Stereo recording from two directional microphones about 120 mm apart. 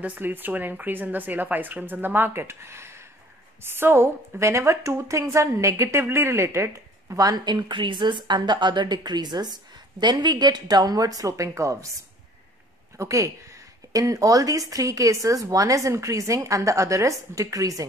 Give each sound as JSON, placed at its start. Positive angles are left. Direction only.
{"t": 0.0, "sound": "a woman's voice", "side_deg": -15}
{"t": 12.9, "sound": "a woman's voice", "side_deg": -25}